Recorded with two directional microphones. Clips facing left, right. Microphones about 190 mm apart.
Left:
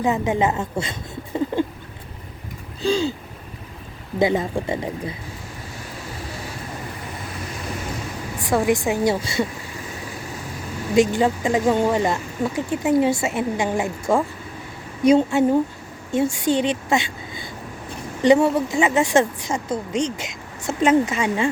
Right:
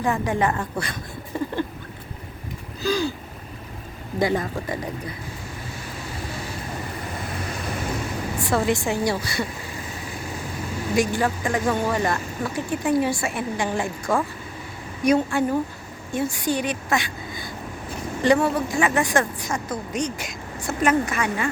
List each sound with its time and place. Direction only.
0.0 s a woman's voice: 20° left (ahead or behind)
2.8 s speech: 25° left (ahead or behind)
4.2 s speech: 20° left (ahead or behind)
8.4 s a woman's voice: 15° left (ahead or behind)
10.9 s speech: 25° left (ahead or behind)